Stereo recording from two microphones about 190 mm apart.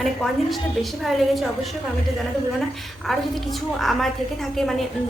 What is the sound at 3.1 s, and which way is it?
A woman's voice, centre (ahead or behind).